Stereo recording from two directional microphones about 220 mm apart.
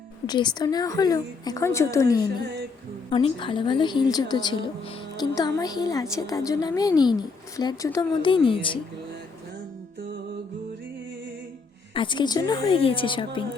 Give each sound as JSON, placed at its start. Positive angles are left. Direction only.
{"t": 0.3, "sound": "a woman's voice", "side_deg": 20}
{"t": 11.9, "sound": "a woman's voice", "side_deg": 20}